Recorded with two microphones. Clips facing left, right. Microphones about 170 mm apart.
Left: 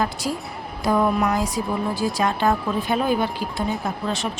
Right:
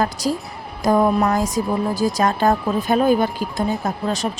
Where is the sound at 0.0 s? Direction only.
40° right (ahead or behind).